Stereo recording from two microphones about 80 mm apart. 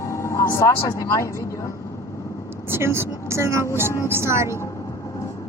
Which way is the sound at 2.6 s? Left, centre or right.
Right.